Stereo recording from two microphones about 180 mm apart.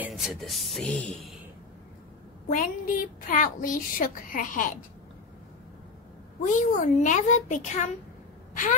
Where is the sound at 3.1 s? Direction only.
50° left (ahead or behind).